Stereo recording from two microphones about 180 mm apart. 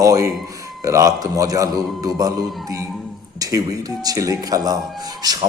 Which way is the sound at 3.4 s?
20° right (ahead or behind).